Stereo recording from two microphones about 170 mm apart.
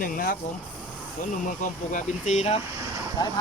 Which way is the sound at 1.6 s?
45° left (ahead or behind).